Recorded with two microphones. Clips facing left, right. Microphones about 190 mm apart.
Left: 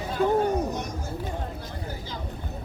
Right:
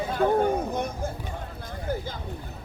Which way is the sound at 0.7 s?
55° right (ahead or behind).